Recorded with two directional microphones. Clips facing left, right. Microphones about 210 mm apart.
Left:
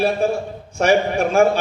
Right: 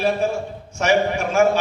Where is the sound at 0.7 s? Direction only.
35° left (ahead or behind).